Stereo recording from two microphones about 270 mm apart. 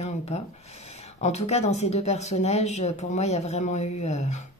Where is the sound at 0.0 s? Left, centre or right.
Left.